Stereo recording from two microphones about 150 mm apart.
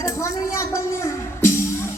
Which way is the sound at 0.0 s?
20° left (ahead or behind).